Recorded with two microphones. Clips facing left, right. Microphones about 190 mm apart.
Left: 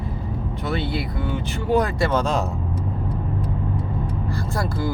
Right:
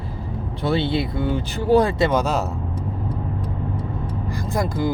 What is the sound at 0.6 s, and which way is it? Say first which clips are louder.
Speech: right 5 dB; 30° right (ahead or behind).